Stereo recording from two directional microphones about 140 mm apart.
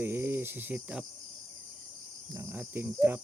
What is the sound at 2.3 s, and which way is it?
Speech, 15° right (ahead or behind).